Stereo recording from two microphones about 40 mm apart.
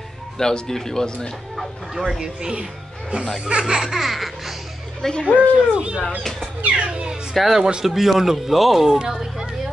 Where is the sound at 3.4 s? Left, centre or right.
Right; by 4.5 s centre.